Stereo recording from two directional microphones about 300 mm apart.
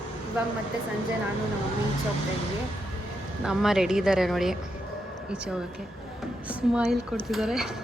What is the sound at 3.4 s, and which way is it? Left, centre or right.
Speech, centre.